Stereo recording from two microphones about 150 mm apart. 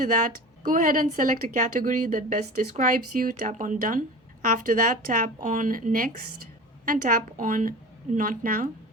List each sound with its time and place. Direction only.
0.0 s speech: 60° right (ahead or behind)